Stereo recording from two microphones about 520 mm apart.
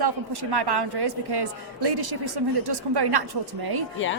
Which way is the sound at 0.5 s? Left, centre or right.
Right.